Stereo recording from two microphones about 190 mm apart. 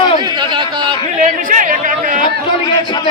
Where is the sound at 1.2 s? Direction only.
45° right (ahead or behind).